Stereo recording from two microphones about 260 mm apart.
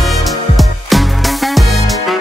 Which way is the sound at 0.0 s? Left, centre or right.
Centre.